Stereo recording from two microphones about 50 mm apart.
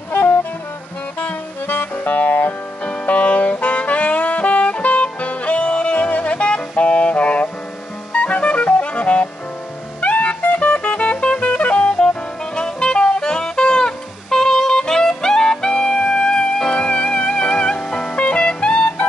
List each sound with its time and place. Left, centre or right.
0.1 s music: left
2.8 s saxophone: left
8.1 s music: left
18.1 s music: left